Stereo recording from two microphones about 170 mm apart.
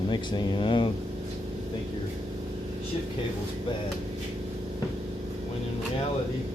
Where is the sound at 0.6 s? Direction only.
30° left (ahead or behind).